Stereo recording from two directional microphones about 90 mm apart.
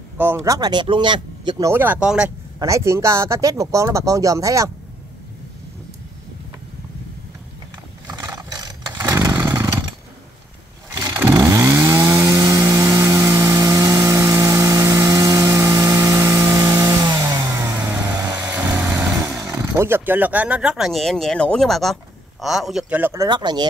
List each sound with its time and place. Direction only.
0.2 s speech: 25° right (ahead or behind)
0.5 s speech: 50° right (ahead or behind)
1.6 s speech: 25° right (ahead or behind)
2.0 s speech: 10° right (ahead or behind)
2.6 s speech: 35° right (ahead or behind)
8.1 s vehicle: 45° right (ahead or behind)
9.7 s chainsaw: 50° right (ahead or behind)
10.9 s vehicle: 40° right (ahead or behind)
11.2 s chainsaw: 35° right (ahead or behind)
17.0 s vehicle: 50° right (ahead or behind)
19.1 s a sound: 35° right (ahead or behind)
19.8 s speech: 25° right (ahead or behind); by 22.8 s 5° right (ahead or behind)
22.8 s speech: 20° right (ahead or behind)
23.1 s speech: 55° right (ahead or behind)